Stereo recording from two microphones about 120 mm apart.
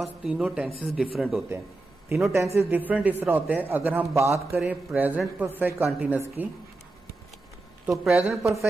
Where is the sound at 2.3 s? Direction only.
25° right (ahead or behind).